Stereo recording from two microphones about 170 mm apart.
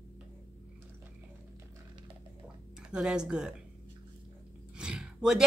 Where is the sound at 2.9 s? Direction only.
5° right (ahead or behind).